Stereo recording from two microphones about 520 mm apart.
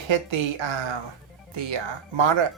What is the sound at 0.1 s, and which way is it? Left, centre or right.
Speech, right.